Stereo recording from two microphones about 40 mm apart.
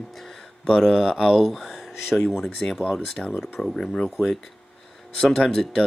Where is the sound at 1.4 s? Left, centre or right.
Centre.